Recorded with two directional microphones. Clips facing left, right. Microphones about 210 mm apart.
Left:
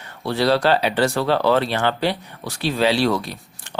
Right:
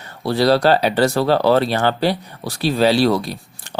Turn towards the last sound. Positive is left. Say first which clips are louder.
# right 4 dB
turn(degrees=-35)  # may be behind; listen again after turning